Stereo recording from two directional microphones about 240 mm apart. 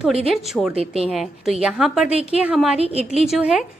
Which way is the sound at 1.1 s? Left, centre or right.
Centre.